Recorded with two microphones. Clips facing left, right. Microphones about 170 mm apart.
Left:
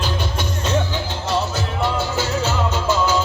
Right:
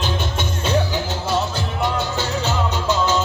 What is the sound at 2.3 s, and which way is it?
Music, centre (ahead or behind).